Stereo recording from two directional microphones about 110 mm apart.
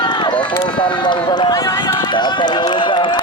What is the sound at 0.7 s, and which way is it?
Speech, 50° left (ahead or behind).